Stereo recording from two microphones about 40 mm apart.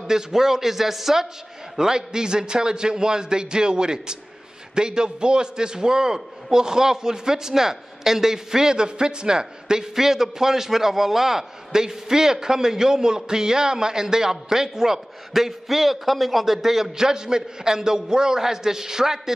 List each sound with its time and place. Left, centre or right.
0.0 s a man's voice: centre